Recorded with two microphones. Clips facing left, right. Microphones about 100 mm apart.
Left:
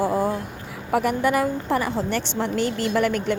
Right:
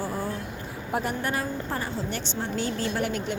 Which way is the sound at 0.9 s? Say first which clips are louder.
Left 8 dB; 70° left (ahead or behind).